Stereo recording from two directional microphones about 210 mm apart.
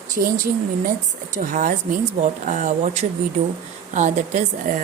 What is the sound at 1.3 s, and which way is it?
A woman's voice, 40° right (ahead or behind).